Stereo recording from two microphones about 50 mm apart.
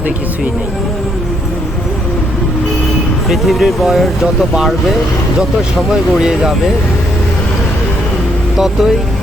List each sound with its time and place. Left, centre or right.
3.2 s speech: centre
5.9 s speech: centre
8.5 s speech: centre